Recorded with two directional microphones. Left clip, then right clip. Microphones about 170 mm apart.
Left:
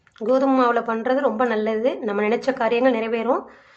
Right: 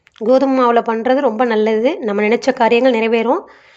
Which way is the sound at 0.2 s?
25° right (ahead or behind).